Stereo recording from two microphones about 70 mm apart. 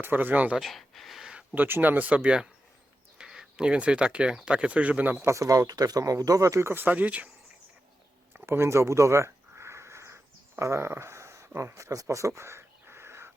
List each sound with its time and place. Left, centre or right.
0.0 s speech: right
0.5 s speech: centre
1.5 s speech: right
5.2 s speech: right
6.8 s speech: right
8.4 s a sound: right
10.6 s speech: right
11.8 s crow: right